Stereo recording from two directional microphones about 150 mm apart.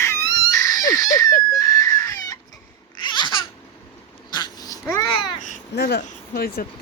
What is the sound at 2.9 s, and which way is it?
Babbling, 30° left (ahead or behind).